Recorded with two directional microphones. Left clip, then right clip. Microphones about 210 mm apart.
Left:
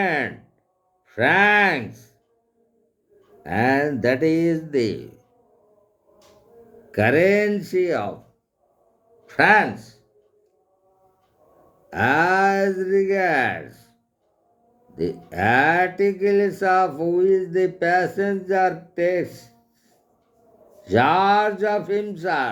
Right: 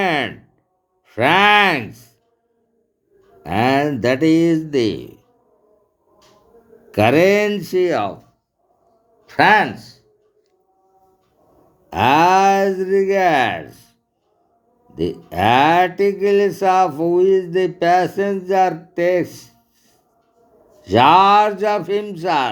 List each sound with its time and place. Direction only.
0.0 s a sound: 25° right (ahead or behind)
1.0 s speech: 25° right (ahead or behind)
3.4 s mantra: 25° right (ahead or behind)
6.9 s mantra: 25° right (ahead or behind)
9.2 s speech: 25° right (ahead or behind)
12.0 s mantra: 25° right (ahead or behind)
14.9 s mantra: 25° right (ahead or behind)
20.8 s mantra: 25° right (ahead or behind)